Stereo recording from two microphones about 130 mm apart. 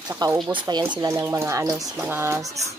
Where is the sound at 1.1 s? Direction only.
20° right (ahead or behind).